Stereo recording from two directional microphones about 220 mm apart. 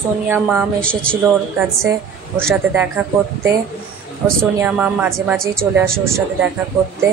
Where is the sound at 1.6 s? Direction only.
10° right (ahead or behind).